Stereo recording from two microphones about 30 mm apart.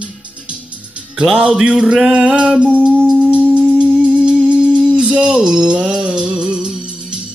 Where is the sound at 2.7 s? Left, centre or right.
Right.